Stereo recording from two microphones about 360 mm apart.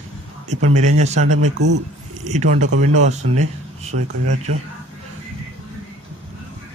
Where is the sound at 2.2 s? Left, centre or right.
Centre.